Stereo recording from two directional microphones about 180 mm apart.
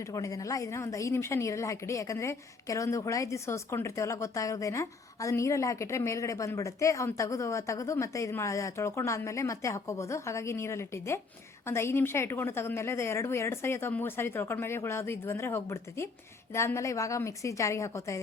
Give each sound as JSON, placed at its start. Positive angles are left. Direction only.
{"t": 0.0, "sound": "a woman's voice", "side_deg": 20}